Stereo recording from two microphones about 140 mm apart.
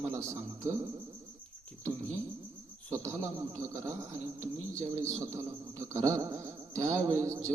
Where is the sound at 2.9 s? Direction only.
20° right (ahead or behind).